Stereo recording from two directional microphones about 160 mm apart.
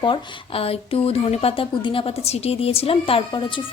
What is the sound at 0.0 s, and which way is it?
Speech, 35° left (ahead or behind).